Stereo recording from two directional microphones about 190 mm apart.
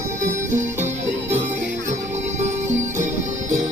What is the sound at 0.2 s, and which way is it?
Music, 40° right (ahead or behind).